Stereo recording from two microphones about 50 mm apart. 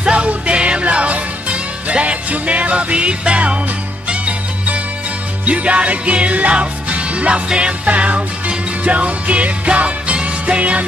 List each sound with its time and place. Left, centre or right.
0.0 s music: right